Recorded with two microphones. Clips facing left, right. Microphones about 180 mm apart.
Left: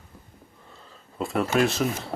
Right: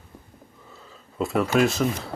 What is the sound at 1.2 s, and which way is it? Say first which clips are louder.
Speech: right 2 dB; centre (ahead or behind).